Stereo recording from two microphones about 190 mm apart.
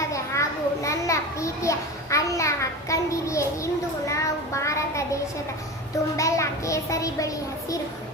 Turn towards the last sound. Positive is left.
turn(degrees=15)  # may be behind; listen again after turning